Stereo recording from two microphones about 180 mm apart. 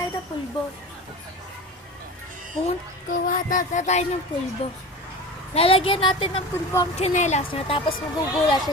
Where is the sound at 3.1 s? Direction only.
50° left (ahead or behind).